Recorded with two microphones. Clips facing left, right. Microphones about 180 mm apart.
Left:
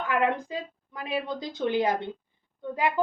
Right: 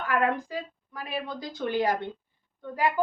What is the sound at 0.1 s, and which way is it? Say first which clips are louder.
A woman's voice: even; 20° left (ahead or behind).